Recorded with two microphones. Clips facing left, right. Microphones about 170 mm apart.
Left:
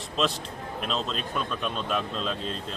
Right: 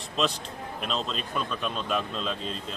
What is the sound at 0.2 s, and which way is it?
A man's voice, centre (ahead or behind).